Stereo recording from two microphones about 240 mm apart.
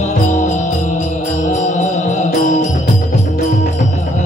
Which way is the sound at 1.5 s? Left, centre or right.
Left.